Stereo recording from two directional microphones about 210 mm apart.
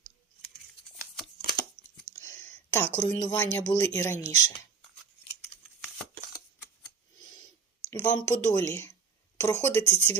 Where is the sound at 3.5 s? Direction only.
10° left (ahead or behind).